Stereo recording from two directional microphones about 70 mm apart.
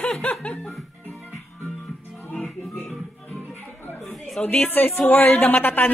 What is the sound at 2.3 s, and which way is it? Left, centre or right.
Music, centre.